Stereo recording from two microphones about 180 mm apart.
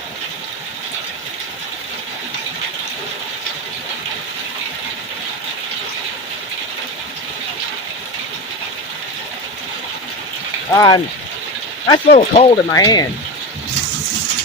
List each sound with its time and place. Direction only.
10.7 s speech: 20° left (ahead or behind)
11.9 s speech: 35° left (ahead or behind)
12.7 s speech: 20° left (ahead or behind)